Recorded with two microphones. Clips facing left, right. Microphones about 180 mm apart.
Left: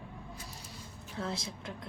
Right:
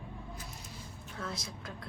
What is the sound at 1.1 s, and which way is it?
Speech, 30° left (ahead or behind).